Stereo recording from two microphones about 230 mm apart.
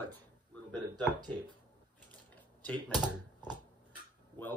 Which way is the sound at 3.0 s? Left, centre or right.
Centre.